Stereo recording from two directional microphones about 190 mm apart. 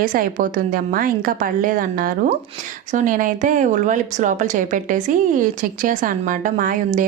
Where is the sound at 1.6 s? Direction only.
45° right (ahead or behind).